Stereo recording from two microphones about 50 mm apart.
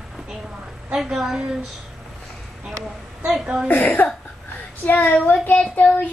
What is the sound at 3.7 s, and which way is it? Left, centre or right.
Speech, left.